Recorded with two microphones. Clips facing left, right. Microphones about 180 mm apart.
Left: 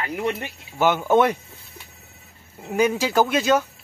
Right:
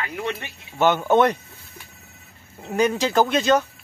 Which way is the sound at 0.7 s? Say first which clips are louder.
Even; 10° left (ahead or behind).